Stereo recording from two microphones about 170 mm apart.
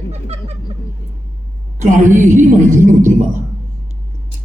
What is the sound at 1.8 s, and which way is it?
A man's voice, 50° right (ahead or behind).